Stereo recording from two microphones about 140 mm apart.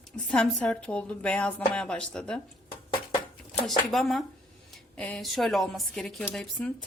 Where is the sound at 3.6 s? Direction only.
Centre (ahead or behind).